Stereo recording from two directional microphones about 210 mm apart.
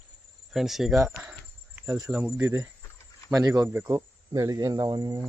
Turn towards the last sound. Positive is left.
turn(degrees=-15)  # may be behind; listen again after turning